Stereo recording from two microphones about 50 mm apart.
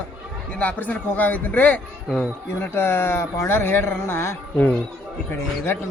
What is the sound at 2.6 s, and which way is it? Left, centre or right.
A man's voice, left.